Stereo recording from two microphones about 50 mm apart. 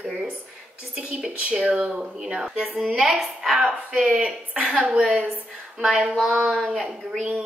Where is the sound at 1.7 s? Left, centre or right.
Centre.